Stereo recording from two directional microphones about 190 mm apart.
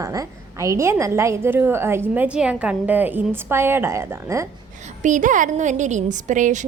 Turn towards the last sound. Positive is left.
turn(degrees=-40)  # may be behind; listen again after turning